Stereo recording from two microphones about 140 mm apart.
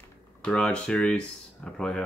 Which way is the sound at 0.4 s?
5° left (ahead or behind).